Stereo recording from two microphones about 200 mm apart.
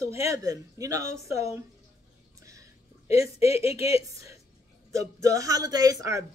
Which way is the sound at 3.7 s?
15° right (ahead or behind).